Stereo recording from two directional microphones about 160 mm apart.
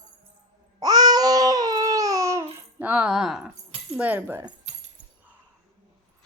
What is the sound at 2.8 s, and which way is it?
Speech, 10° right (ahead or behind).